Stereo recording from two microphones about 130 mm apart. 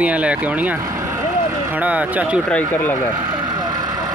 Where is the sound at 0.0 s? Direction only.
10° right (ahead or behind).